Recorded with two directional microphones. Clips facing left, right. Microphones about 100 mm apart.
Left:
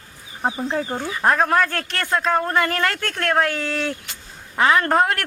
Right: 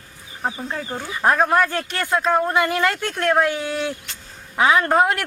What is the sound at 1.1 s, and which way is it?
A man's voice, centre (ahead or behind).